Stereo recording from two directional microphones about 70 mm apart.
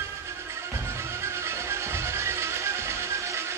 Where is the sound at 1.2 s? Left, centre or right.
Right.